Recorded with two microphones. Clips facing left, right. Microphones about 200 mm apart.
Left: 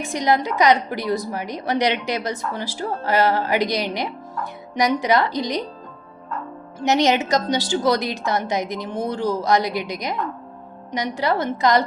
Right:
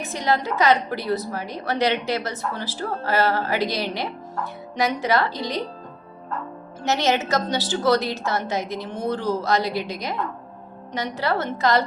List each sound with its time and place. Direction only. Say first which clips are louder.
0.0 s a woman's voice: left 3 dB; 15° left (ahead or behind)
6.7 s a woman's voice: left 4 dB; 15° left (ahead or behind)